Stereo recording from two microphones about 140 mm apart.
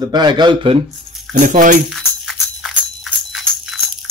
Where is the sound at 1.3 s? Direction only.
60° right (ahead or behind).